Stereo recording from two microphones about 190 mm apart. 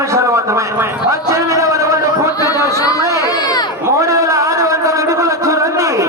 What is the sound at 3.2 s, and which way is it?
Crowd, 20° left (ahead or behind).